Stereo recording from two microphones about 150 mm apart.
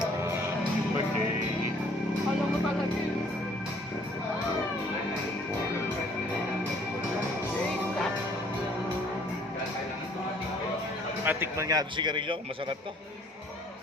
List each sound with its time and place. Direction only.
11.3 s a man's voice: 15° right (ahead or behind); by 12.7 s 35° right (ahead or behind)